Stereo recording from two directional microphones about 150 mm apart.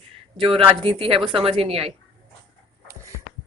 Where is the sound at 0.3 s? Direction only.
35° right (ahead or behind).